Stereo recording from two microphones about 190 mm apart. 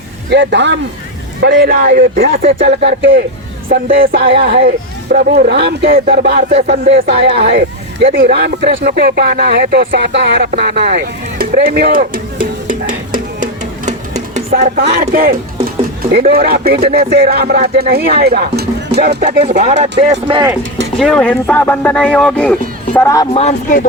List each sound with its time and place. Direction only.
0.3 s a man's voice: 65° right (ahead or behind)
1.8 s speech: 55° right (ahead or behind)
2.6 s speech: 60° right (ahead or behind)
4.4 s speech: 65° right (ahead or behind); by 13.1 s 45° right (ahead or behind)
14.5 s speech: 55° right (ahead or behind); by 20.5 s 25° right (ahead or behind)
21.0 s speech: 5° left (ahead or behind)
23.3 s speech: 35° left (ahead or behind)